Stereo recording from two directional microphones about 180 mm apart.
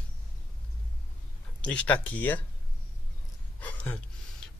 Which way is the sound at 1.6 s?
5° left (ahead or behind).